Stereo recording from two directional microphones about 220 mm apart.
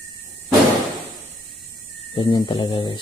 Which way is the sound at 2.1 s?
20° left (ahead or behind).